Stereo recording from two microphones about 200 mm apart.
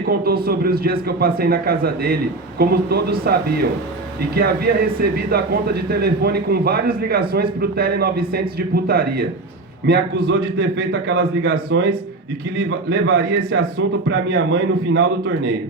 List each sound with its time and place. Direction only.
0.0 s a man's voice: 50° right (ahead or behind)